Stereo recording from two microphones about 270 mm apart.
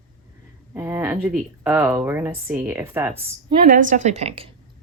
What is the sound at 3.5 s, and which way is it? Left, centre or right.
Speech, right.